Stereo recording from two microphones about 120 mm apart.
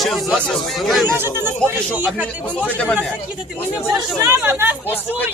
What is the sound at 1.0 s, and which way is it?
Speech, 20° right (ahead or behind).